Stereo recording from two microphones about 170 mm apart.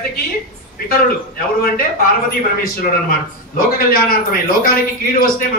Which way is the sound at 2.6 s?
60° left (ahead or behind).